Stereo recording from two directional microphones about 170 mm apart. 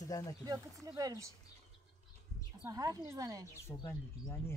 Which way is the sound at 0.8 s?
20° right (ahead or behind).